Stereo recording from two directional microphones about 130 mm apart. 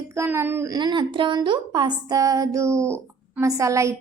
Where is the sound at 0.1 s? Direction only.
20° right (ahead or behind).